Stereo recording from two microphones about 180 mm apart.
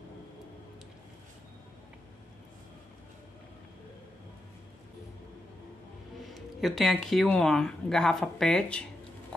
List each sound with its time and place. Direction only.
6.2 s speech: centre (ahead or behind)